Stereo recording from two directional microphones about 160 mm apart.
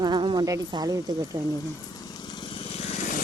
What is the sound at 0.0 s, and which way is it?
Speech, 30° right (ahead or behind).